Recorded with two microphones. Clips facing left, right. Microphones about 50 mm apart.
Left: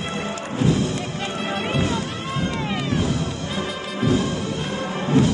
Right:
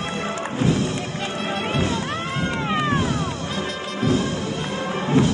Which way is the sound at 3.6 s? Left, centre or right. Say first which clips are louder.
Left 1 dB; centre.